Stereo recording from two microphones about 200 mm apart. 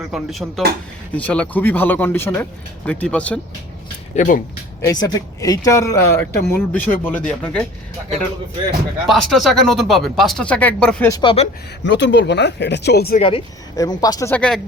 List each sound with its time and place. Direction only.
0.1 s speech: centre (ahead or behind)
4.1 s speech: 40° left (ahead or behind)
4.9 s speech: 20° left (ahead or behind)
9.0 s speech: centre (ahead or behind)
11.1 s speech: 25° left (ahead or behind)
11.8 s speech: 60° left (ahead or behind)
13.1 s speech: 30° left (ahead or behind); by 14.6 s 5° left (ahead or behind)